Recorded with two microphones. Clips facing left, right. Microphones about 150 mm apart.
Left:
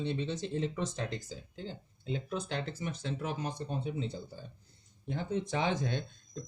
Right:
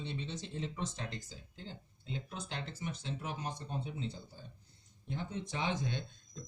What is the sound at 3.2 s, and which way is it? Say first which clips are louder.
Speech: left 5 dB; 50° left (ahead or behind).